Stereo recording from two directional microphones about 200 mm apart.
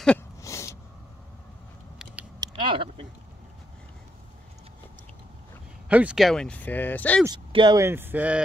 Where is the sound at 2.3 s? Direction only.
20° right (ahead or behind).